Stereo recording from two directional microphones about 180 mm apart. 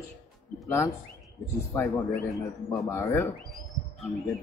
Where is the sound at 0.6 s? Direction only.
15° left (ahead or behind).